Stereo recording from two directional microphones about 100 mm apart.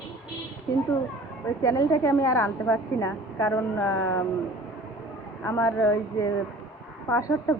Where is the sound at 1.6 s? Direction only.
30° left (ahead or behind).